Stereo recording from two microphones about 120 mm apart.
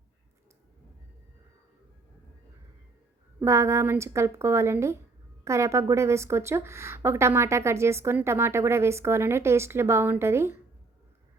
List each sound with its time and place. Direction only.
3.4 s a woman's voice: 20° right (ahead or behind)